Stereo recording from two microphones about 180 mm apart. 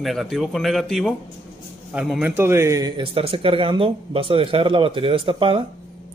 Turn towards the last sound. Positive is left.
turn(degrees=-30)  # may be behind; listen again after turning